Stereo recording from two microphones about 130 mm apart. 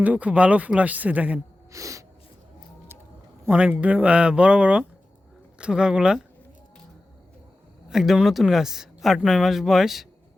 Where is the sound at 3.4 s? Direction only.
15° right (ahead or behind).